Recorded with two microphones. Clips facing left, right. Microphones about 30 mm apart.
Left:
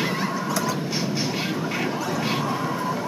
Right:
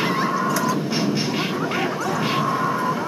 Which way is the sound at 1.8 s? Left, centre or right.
Centre.